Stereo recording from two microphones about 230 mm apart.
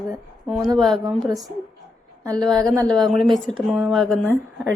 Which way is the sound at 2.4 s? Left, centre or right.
Centre.